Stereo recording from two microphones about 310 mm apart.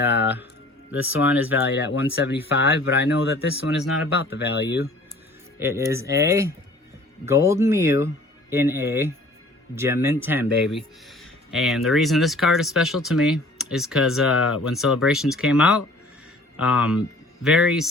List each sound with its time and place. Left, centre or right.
0.2 s music: centre
0.9 s speech: centre
1.6 s speech: left
5.5 s speech: centre